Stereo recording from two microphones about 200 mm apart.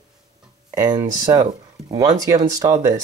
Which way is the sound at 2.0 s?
15° right (ahead or behind).